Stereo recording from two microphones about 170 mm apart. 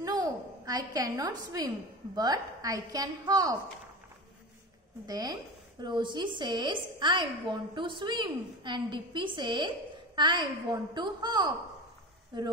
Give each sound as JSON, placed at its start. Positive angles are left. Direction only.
{"t": 0.0, "sound": "a sound", "side_deg": -20}
{"t": 2.1, "sound": "a woman's voice", "side_deg": -20}
{"t": 5.0, "sound": "a woman's voice", "side_deg": -20}